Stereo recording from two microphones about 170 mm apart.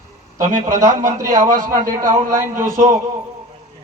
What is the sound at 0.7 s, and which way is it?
A man's voice, 20° right (ahead or behind).